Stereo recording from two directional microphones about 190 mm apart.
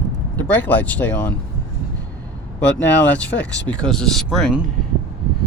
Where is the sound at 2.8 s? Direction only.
5° left (ahead or behind).